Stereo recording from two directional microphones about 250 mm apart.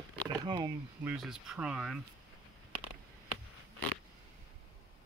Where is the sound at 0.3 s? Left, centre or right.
Centre.